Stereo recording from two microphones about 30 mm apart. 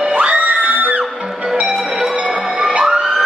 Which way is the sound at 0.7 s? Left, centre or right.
Right.